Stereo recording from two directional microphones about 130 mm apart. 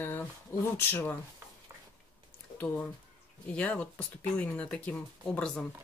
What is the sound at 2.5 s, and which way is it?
Speech, 10° left (ahead or behind).